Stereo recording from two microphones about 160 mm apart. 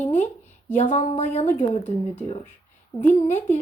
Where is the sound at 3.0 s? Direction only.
15° left (ahead or behind).